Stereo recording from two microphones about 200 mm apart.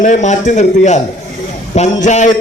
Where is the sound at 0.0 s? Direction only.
40° left (ahead or behind).